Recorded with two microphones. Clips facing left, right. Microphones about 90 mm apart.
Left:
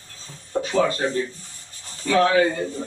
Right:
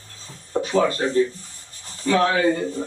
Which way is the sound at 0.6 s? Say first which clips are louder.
Right 1 dB; 45° right (ahead or behind).